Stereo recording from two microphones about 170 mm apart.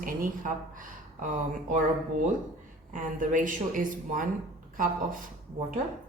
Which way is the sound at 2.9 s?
50° right (ahead or behind).